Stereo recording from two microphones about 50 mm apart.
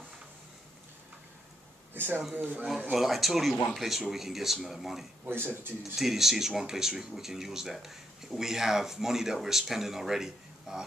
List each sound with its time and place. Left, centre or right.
2.3 s speech: right
2.9 s speech: centre
5.2 s speech: right
5.9 s speech: centre